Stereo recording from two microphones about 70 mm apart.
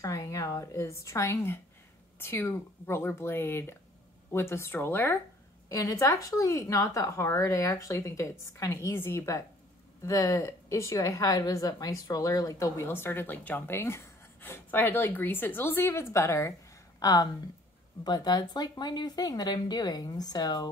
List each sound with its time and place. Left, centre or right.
0.0 s a woman's voice: left
5.7 s speech: left
8.9 s speech: left
12.9 s speech: left
14.7 s speech: left
17.0 s speech: left
18.0 s speech: left